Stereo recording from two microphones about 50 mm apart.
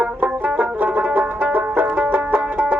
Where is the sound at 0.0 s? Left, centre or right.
Right.